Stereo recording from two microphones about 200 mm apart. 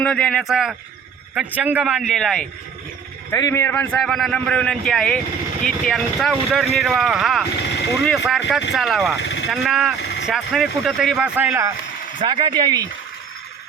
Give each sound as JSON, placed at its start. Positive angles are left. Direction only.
{"t": 0.0, "sound": "a man's voice", "side_deg": 5}
{"t": 3.3, "sound": "a man's voice", "side_deg": 15}
{"t": 9.1, "sound": "a sound", "side_deg": 60}
{"t": 9.5, "sound": "a man's voice", "side_deg": 0}
{"t": 10.0, "sound": "vehicle", "side_deg": 55}
{"t": 10.2, "sound": "a man's voice", "side_deg": 0}
{"t": 12.2, "sound": "speech", "side_deg": -25}